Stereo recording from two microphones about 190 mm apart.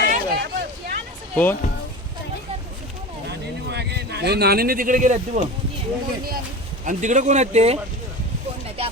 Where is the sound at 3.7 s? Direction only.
60° right (ahead or behind); by 5.4 s 40° right (ahead or behind).